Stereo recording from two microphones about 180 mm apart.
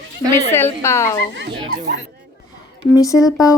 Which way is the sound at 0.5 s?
15° left (ahead or behind).